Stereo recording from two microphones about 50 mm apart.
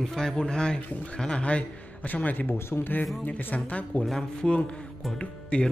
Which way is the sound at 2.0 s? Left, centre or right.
Left.